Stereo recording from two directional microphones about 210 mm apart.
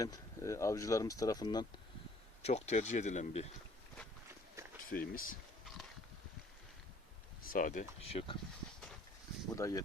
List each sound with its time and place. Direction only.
0.0 s speech: 15° left (ahead or behind)
2.4 s speech: 30° left (ahead or behind)
4.9 s speech: 45° left (ahead or behind)
7.4 s speech: 40° left (ahead or behind)
9.6 s speech: 15° left (ahead or behind)